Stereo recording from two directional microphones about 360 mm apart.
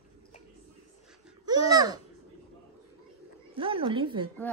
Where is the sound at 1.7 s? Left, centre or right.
Centre.